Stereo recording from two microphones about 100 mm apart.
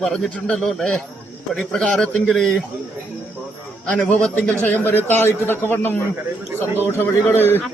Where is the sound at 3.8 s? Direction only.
15° left (ahead or behind).